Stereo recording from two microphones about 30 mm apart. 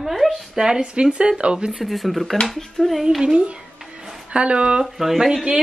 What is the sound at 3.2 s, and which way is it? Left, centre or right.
Speech, right.